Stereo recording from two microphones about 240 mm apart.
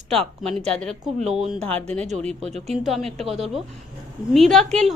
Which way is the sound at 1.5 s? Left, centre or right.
Right.